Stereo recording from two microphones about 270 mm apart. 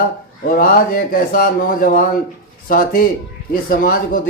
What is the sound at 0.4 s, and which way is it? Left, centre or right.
Speech, left.